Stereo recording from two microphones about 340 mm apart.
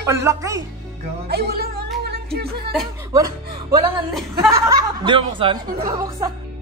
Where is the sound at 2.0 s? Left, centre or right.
Right.